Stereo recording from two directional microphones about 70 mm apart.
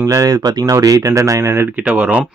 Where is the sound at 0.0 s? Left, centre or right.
Right.